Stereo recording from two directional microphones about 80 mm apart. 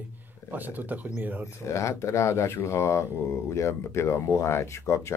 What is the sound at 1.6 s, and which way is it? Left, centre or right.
Speech, left.